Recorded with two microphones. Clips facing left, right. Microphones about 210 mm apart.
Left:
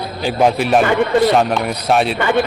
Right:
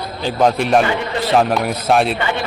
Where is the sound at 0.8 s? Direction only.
55° left (ahead or behind).